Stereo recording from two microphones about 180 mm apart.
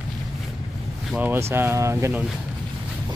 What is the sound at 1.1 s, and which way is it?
Speech, 10° right (ahead or behind).